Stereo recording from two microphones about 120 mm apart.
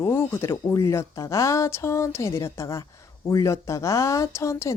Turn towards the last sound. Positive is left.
turn(degrees=25)  # may be behind; listen again after turning